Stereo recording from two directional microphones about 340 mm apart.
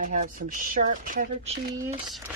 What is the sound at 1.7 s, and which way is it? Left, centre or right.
Speech, centre.